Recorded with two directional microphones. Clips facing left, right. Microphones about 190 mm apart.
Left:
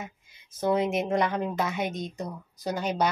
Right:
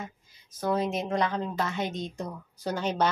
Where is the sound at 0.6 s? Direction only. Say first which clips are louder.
Left 3 dB; 20° left (ahead or behind).